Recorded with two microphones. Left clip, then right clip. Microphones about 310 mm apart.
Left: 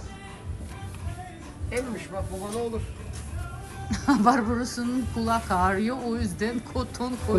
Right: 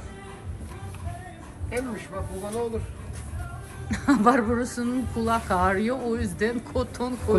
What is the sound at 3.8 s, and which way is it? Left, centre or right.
A woman's voice, centre.